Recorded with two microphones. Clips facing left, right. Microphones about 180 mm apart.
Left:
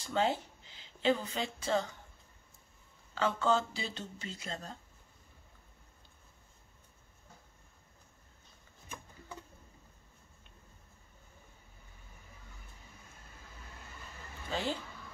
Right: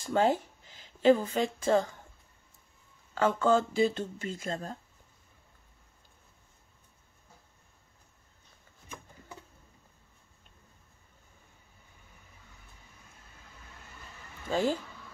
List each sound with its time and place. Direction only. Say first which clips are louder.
0.0 s speech: right 5 dB; 50° right (ahead or behind)
3.2 s speech: right 5 dB; 50° right (ahead or behind)
14.5 s speech: right 7 dB; 45° right (ahead or behind)